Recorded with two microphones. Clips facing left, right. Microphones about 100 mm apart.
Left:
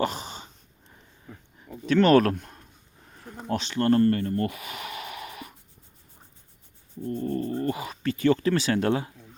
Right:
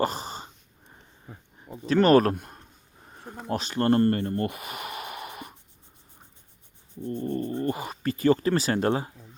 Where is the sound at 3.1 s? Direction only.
30° right (ahead or behind).